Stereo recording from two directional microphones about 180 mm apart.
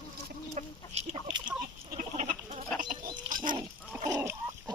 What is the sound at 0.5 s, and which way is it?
Chicken, 40° right (ahead or behind).